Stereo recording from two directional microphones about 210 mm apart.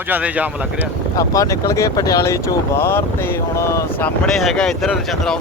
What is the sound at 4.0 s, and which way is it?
Speech, centre (ahead or behind).